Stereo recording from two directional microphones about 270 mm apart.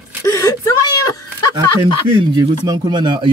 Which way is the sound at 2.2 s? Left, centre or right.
Centre.